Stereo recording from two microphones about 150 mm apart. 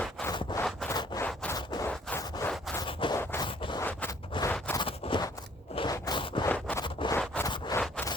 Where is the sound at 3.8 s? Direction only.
10° left (ahead or behind).